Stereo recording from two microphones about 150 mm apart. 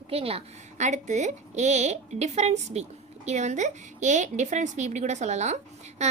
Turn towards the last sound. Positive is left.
turn(degrees=-50)  # may be behind; listen again after turning